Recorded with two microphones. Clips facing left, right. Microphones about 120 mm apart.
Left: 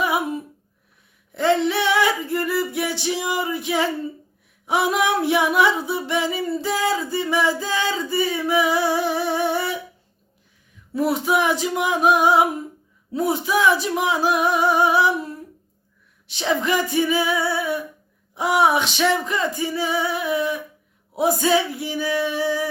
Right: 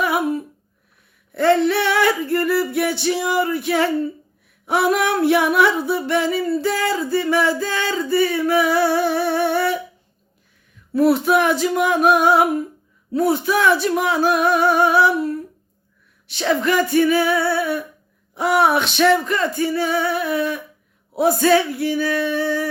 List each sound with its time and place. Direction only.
0.0 s a sound: 15° left (ahead or behind)
1.3 s music: 20° left (ahead or behind)
2.0 s music: 55° right (ahead or behind)
2.3 s music: 20° left (ahead or behind)
11.4 s music: 15° left (ahead or behind)
18.7 s music: 60° right (ahead or behind)
19.0 s music: 15° left (ahead or behind)